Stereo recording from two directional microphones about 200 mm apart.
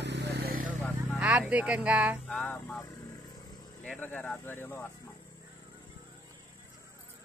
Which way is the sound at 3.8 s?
5° left (ahead or behind).